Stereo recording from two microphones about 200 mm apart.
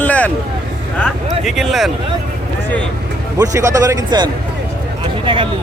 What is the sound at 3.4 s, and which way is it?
Speech, 15° right (ahead or behind).